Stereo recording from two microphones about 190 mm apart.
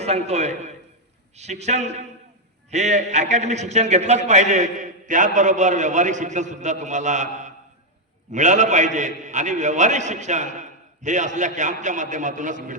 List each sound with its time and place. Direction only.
0.0 s a man's voice: 35° right (ahead or behind)